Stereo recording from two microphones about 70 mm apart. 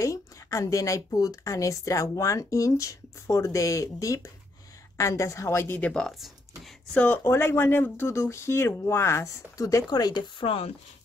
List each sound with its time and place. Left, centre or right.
0.0 s a woman's voice: left
5.8 s speech: centre
6.1 s speech: centre
6.9 s speech: left
7.2 s speech: left
9.8 s speech: left